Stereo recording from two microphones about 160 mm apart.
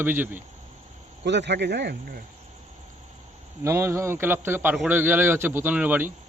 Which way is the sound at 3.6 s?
15° right (ahead or behind).